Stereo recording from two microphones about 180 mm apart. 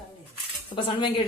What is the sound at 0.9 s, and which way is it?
Speech, 25° left (ahead or behind).